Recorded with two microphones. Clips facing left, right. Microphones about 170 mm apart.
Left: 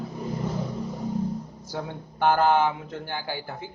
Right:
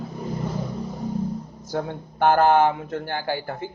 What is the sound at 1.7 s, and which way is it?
A man's voice, 50° right (ahead or behind).